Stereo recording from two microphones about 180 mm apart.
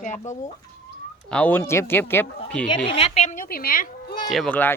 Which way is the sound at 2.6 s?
30° left (ahead or behind).